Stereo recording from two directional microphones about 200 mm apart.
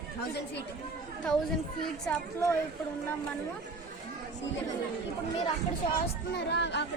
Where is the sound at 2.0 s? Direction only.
10° left (ahead or behind).